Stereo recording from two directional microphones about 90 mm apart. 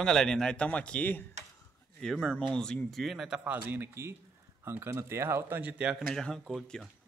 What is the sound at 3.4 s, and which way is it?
Speech, 25° right (ahead or behind).